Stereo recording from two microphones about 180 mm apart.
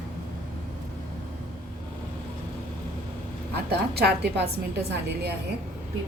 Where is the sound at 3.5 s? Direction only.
65° right (ahead or behind).